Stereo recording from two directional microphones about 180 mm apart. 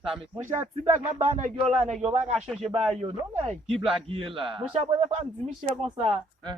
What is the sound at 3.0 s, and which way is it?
A man's voice, 25° right (ahead or behind).